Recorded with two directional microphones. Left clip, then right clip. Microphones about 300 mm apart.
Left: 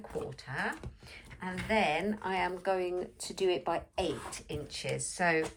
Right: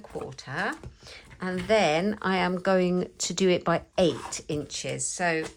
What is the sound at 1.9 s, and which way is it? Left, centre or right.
Speech, right.